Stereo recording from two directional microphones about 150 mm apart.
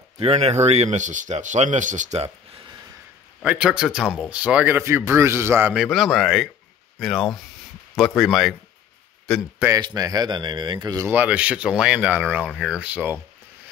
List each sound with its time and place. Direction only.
0.2 s speech: 45° right (ahead or behind)
3.4 s speech: 5° right (ahead or behind)
5.8 s speech: centre (ahead or behind)
9.8 s speech: 25° right (ahead or behind)
11.1 s speech: 10° right (ahead or behind)